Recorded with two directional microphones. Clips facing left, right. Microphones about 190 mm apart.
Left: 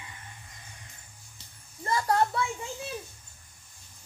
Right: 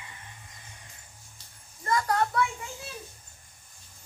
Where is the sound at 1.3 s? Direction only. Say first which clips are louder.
Left 5 dB; 25° left (ahead or behind).